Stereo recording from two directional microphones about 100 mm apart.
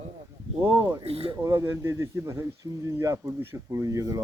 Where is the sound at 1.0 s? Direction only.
90° right.